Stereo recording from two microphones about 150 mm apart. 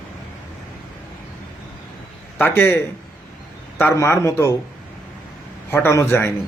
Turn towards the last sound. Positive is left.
turn(degrees=15)  # may be behind; listen again after turning